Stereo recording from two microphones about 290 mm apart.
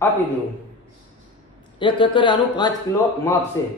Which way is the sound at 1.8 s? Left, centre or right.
Centre.